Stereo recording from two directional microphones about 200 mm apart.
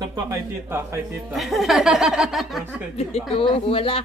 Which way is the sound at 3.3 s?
30° left (ahead or behind).